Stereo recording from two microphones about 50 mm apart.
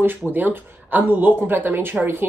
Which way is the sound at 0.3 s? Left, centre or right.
Right.